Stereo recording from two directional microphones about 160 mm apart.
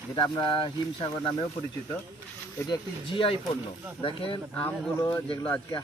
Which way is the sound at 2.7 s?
35° left (ahead or behind).